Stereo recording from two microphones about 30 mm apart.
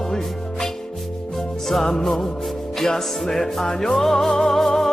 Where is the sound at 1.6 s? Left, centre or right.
Centre.